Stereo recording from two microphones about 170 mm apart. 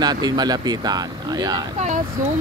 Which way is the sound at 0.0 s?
25° right (ahead or behind).